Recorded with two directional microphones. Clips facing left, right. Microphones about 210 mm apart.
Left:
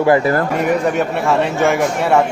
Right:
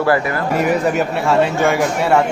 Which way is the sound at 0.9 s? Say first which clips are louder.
Even; centre (ahead or behind).